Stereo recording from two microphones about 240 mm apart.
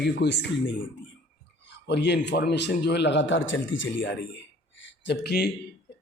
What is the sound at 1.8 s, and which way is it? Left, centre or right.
A man's voice, left.